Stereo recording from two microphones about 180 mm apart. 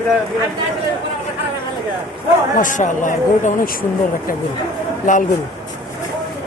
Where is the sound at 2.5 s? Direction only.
45° left (ahead or behind).